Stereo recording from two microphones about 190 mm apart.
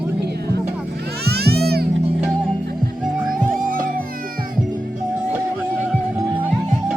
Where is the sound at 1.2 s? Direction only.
55° right (ahead or behind).